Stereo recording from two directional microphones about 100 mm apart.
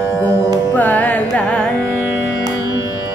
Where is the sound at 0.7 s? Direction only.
15° left (ahead or behind).